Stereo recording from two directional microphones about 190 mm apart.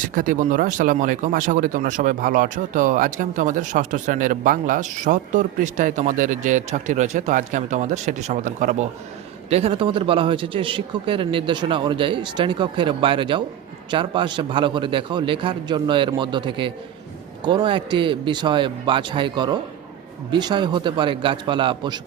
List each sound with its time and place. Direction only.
0.0 s speech: 45° right (ahead or behind); by 22.0 s 25° right (ahead or behind)